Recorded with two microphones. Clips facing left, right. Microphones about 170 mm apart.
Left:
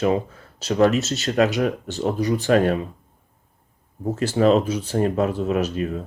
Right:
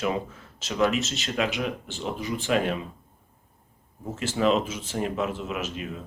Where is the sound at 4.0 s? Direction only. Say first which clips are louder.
Left 6 dB; 35° left (ahead or behind).